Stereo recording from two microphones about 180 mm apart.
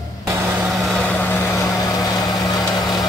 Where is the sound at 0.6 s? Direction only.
5° left (ahead or behind); by 2.3 s 20° left (ahead or behind).